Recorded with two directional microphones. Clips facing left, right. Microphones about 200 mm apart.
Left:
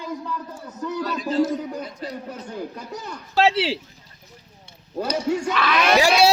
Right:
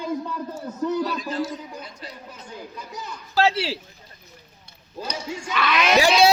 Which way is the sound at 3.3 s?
20° left (ahead or behind).